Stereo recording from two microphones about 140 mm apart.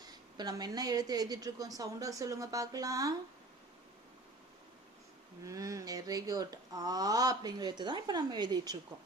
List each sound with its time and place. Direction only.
0.0 s speech: 30° right (ahead or behind)
5.5 s speech: 25° right (ahead or behind)